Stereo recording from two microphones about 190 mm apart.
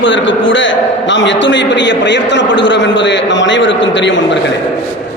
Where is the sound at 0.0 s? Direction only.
75° left (ahead or behind).